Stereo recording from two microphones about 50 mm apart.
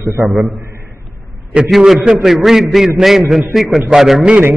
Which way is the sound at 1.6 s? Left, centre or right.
Centre.